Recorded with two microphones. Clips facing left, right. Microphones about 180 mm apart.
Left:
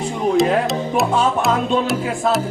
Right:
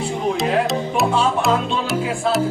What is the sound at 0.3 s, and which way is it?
Speech, centre (ahead or behind).